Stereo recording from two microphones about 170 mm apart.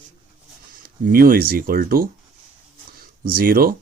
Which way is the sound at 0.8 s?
60° right (ahead or behind).